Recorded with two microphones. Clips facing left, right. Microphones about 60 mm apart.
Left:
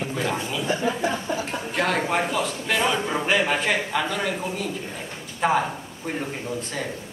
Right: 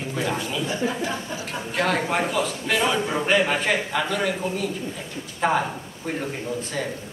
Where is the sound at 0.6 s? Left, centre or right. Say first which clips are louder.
Left 3 dB; left.